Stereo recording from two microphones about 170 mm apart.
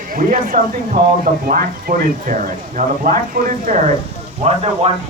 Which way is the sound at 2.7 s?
55° right (ahead or behind).